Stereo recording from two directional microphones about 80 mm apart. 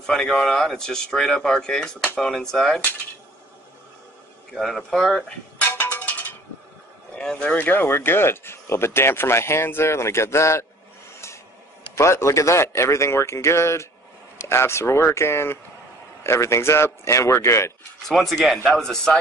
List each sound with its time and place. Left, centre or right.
0.0 s speech: centre
4.6 s speech: centre
5.6 s music: left
7.2 s speech: centre; by 10.7 s left
11.9 s speech: left
18.0 s speech: centre